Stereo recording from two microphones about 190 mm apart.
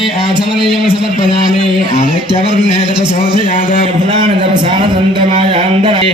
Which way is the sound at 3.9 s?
25° right (ahead or behind).